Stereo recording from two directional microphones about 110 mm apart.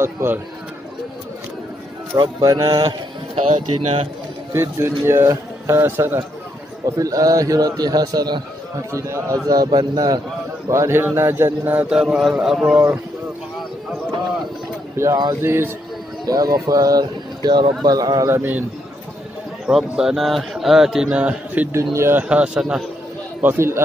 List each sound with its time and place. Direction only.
0.0 s a man's voice: 20° right (ahead or behind)
2.1 s a man's voice: 40° right (ahead or behind)
3.4 s speech: 75° right (ahead or behind)
4.5 s a man's voice: 25° right (ahead or behind)
7.0 s a man's voice: 30° right (ahead or behind)
10.7 s a man's voice: 25° right (ahead or behind); by 12.7 s 5° right (ahead or behind)
12.7 s a man's voice: 25° right (ahead or behind)
15.0 s a man's voice: 25° right (ahead or behind)
16.3 s speech: 35° right (ahead or behind)
18.3 s a man's voice: 20° right (ahead or behind)
19.6 s speech: 5° right (ahead or behind)
21.9 s a man's voice: 25° right (ahead or behind)
22.3 s a man's voice: 10° right (ahead or behind)
23.4 s a man's voice: 25° right (ahead or behind)